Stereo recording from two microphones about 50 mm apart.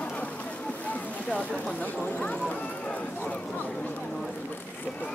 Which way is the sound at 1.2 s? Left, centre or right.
Left.